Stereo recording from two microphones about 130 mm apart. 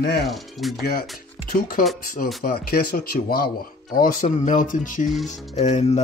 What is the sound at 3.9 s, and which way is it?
Speech, 85° left.